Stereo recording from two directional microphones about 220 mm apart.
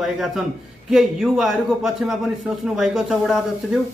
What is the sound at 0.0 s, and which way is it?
A man's voice, centre (ahead or behind).